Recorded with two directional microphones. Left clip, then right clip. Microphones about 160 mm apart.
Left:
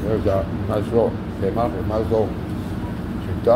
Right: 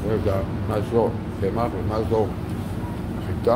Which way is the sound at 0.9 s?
20° right (ahead or behind).